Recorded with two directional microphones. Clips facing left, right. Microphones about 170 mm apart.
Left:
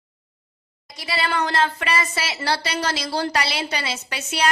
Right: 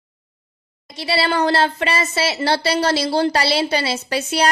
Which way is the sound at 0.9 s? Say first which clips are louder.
Right 5 dB; 30° right (ahead or behind).